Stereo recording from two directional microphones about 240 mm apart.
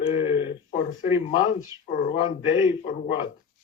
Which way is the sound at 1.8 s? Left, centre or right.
Left.